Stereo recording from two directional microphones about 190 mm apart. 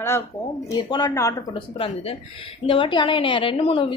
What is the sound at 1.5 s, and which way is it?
A woman's voice, 30° left (ahead or behind).